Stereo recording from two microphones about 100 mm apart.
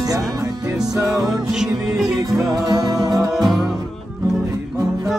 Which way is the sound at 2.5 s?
40° right (ahead or behind).